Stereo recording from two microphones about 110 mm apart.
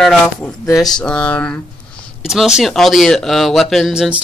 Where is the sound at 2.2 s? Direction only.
5° right (ahead or behind).